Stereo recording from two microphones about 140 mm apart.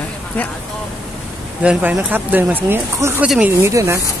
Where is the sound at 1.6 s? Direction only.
10° right (ahead or behind).